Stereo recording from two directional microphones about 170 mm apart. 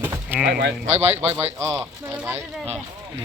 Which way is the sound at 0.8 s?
40° right (ahead or behind).